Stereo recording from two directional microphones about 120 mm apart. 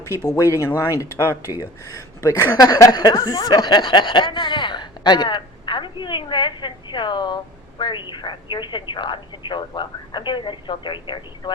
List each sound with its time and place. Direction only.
0.3 s speech: 30° left (ahead or behind)